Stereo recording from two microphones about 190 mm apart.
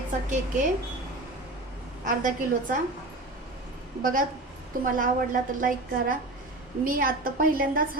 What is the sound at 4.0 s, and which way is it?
A woman's voice, 45° right (ahead or behind).